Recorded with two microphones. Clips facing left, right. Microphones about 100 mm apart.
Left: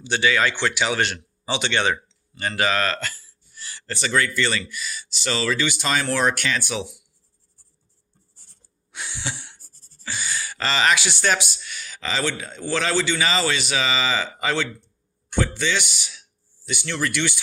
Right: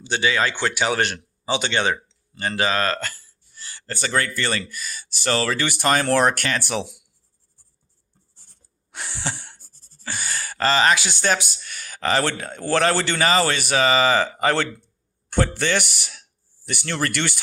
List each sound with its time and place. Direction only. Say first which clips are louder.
0.0 s speech: left 1 dB; 35° right (ahead or behind); by 6.8 s 50° right (ahead or behind)
8.9 s a sound: right 2 dB; 45° right (ahead or behind)
10.0 s speech: even; 50° right (ahead or behind)